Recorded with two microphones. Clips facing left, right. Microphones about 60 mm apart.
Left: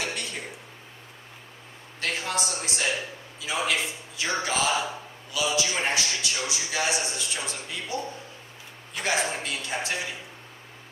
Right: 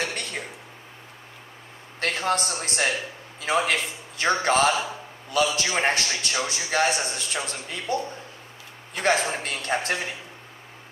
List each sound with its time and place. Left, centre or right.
0.0 s a sound: right
2.0 s a man's voice: right
9.0 s a man's voice: right